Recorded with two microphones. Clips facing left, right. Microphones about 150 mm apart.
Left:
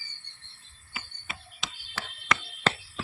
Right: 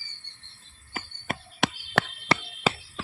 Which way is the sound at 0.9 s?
60° right (ahead or behind).